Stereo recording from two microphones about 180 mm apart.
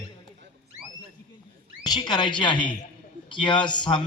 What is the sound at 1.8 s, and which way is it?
A man's voice, 25° left (ahead or behind).